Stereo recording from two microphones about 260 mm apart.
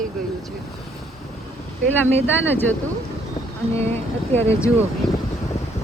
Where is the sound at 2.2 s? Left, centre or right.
Centre.